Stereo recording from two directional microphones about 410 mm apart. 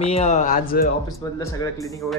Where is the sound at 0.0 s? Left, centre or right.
Centre.